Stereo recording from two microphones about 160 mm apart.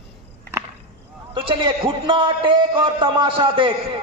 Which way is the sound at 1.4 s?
30° right (ahead or behind).